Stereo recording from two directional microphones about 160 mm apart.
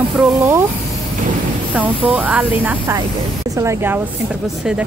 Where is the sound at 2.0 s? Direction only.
10° right (ahead or behind).